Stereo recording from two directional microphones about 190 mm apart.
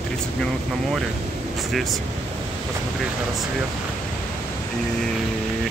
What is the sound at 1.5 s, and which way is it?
Speech, centre (ahead or behind).